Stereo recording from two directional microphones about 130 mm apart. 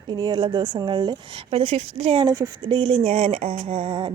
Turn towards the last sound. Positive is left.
turn(degrees=-40)  # may be behind; listen again after turning